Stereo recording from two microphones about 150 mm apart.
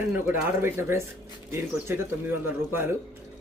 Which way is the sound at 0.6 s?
15° right (ahead or behind).